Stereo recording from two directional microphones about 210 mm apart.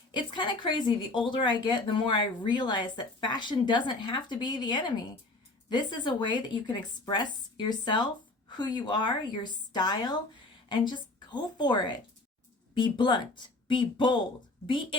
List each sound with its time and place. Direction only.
0.1 s a woman's voice: 25° left (ahead or behind)